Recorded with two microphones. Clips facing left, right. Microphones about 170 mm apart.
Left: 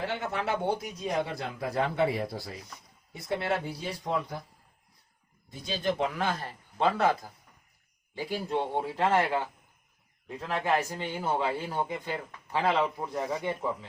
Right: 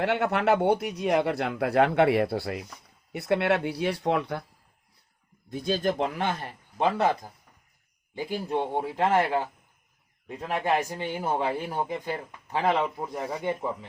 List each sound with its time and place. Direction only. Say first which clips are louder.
0.0 s speech: right 7 dB; 70° right (ahead or behind)
5.5 s speech: right 4 dB; 55° right (ahead or behind)
6.1 s speech: right 2 dB; 20° right (ahead or behind)